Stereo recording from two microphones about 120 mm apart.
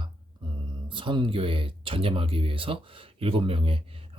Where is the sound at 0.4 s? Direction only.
40° right (ahead or behind).